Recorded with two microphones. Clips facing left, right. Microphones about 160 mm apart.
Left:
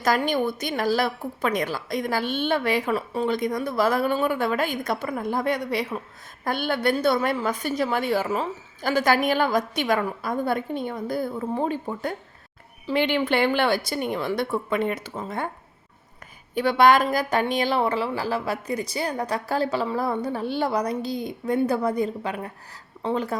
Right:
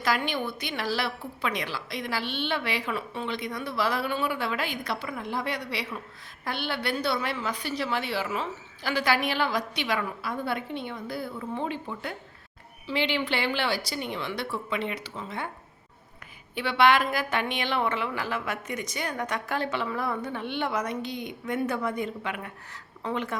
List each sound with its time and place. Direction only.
0.0 s a woman's voice: 45° left (ahead or behind)
16.6 s speech: 45° left (ahead or behind)